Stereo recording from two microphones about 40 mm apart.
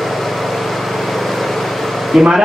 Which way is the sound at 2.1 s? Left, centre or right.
Centre.